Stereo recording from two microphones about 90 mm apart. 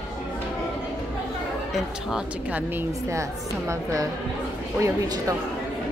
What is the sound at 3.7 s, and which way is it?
Speech, 35° right (ahead or behind).